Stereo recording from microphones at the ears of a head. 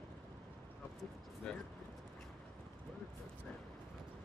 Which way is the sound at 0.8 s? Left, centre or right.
Left.